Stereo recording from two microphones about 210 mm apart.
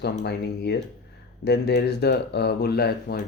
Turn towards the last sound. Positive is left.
turn(degrees=50)  # may be behind; listen again after turning